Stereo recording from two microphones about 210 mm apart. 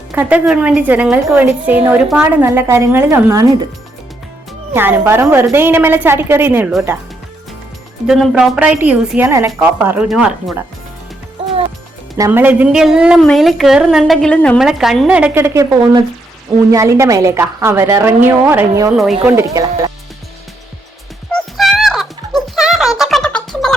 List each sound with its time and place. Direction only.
0.1 s a woman's voice: 5° right (ahead or behind)
4.7 s a woman's voice: 10° right (ahead or behind)
8.0 s a woman's voice: centre (ahead or behind)
12.1 s a woman's voice: 15° right (ahead or behind)
21.3 s music: centre (ahead or behind)